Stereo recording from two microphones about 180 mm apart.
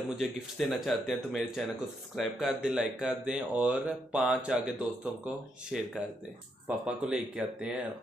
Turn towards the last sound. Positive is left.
turn(degrees=-5)  # may be behind; listen again after turning